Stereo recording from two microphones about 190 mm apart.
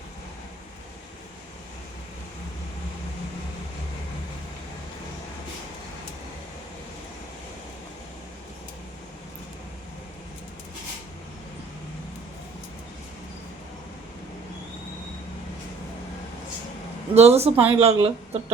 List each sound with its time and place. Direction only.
17.2 s speech: 35° right (ahead or behind)